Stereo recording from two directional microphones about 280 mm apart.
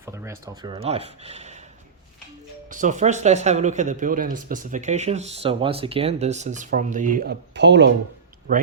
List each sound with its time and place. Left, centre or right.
0.0 s speech: centre
2.6 s speech: right